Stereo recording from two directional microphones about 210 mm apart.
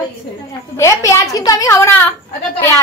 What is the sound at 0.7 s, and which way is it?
A woman's voice, 15° left (ahead or behind).